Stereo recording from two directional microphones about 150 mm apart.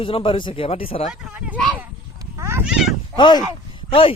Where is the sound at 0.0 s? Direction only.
35° left (ahead or behind).